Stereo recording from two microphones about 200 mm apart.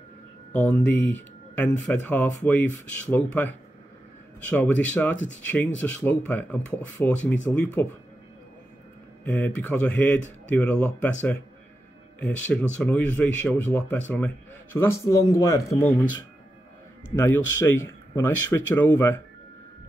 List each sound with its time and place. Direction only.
0.5 s a man's voice: 5° left (ahead or behind)
5.1 s speech: 70° left (ahead or behind)
5.8 s a man's voice: 10° left (ahead or behind)
9.2 s a man's voice: 5° left (ahead or behind)
17.1 s a man's voice: 10° left (ahead or behind)